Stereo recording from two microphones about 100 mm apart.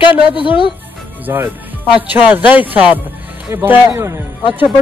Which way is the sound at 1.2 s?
25° right (ahead or behind).